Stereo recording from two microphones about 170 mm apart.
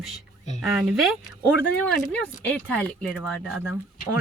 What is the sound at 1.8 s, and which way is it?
Speech, 10° left (ahead or behind).